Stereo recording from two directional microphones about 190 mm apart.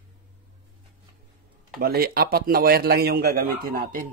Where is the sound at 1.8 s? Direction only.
50° right (ahead or behind).